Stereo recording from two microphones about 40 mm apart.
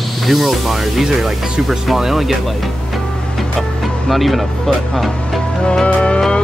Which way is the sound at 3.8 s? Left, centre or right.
Centre.